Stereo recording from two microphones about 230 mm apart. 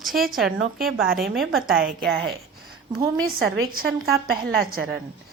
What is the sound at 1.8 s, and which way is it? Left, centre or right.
Speech, right.